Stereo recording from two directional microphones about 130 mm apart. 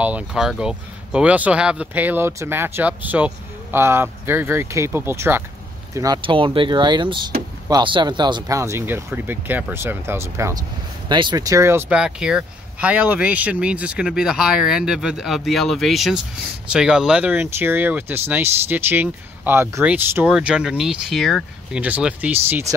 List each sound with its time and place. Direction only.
0.0 s speech: 5° right (ahead or behind)
5.9 s speech: 30° right (ahead or behind)
8.5 s speech: 20° right (ahead or behind)
11.1 s speech: 35° right (ahead or behind)
11.9 s speech: 5° right (ahead or behind)
21.8 s speech: 10° right (ahead or behind)